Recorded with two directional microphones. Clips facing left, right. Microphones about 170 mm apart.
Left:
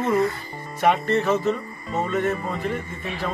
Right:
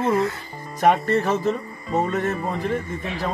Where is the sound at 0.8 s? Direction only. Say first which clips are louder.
Right 2 dB; 40° right (ahead or behind).